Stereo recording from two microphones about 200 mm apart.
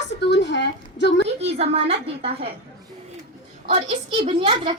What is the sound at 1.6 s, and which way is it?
Speech, 30° right (ahead or behind).